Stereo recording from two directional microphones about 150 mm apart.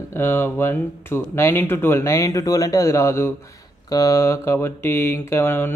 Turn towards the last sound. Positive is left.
turn(degrees=15)  # may be behind; listen again after turning